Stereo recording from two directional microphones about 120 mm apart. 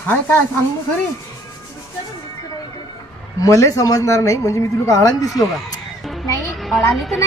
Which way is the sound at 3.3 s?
25° left (ahead or behind).